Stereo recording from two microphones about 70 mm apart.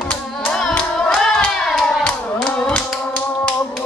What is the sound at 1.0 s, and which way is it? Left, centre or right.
Hands, centre.